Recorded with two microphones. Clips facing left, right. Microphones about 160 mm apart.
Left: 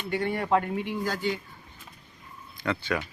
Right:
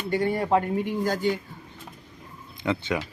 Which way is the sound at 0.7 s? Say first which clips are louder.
Right 4 dB; 45° right (ahead or behind).